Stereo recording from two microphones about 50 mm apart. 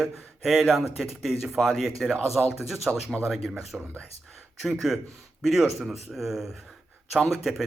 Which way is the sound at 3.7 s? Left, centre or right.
Centre.